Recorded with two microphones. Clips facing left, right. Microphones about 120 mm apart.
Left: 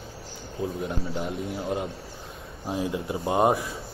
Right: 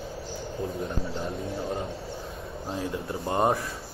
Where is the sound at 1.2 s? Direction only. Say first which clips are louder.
Left 1 dB; 30° right (ahead or behind).